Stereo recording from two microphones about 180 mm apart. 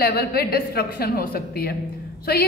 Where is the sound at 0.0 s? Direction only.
60° left (ahead or behind).